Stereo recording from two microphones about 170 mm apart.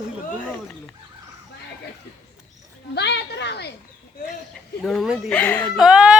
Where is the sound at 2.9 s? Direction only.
85° left.